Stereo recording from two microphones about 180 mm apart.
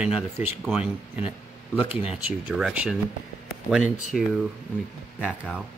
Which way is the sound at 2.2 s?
5° right (ahead or behind).